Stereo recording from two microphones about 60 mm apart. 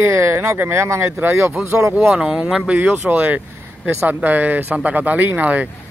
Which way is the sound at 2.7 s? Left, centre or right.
Right.